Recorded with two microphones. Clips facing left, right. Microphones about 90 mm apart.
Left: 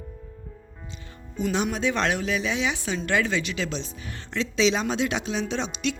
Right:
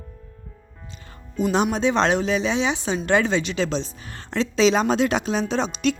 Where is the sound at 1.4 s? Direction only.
35° right (ahead or behind).